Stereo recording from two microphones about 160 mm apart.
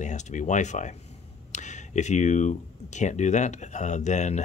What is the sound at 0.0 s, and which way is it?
Speech, 50° left (ahead or behind).